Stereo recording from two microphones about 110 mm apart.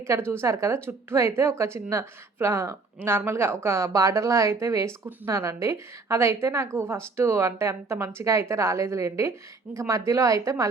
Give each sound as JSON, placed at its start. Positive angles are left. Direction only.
{"t": 0.0, "sound": "a woman's voice", "side_deg": -25}